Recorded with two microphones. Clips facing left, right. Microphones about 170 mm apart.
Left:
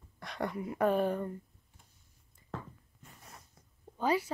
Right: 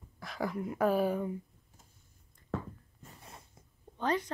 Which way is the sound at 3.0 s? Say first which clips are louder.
Right 1 dB; 30° right (ahead or behind).